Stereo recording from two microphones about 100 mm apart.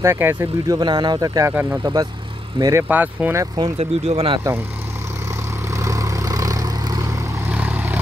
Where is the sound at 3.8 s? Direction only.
85° right.